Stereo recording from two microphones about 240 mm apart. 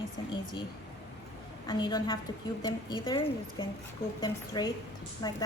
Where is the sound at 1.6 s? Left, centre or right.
Centre.